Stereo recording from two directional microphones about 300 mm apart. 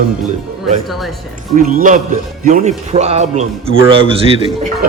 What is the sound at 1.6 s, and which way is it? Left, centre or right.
A man's voice, right.